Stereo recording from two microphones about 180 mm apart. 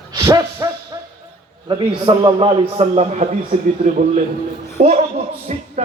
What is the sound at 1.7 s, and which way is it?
A man's voice, 25° right (ahead or behind).